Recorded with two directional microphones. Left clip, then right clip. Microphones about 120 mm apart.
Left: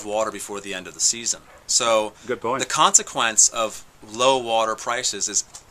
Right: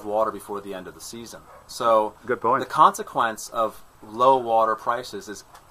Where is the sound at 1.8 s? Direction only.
45° left (ahead or behind).